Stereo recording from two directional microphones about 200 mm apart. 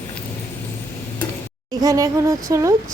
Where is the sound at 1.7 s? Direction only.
20° right (ahead or behind).